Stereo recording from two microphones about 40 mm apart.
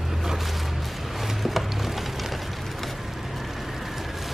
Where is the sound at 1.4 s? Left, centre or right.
Centre.